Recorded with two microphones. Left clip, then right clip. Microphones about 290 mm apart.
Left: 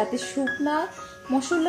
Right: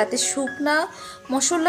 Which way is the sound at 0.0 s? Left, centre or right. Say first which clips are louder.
Right 3 dB; right.